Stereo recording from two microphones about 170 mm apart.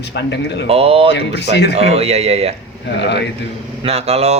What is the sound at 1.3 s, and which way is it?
Speech, 85° left.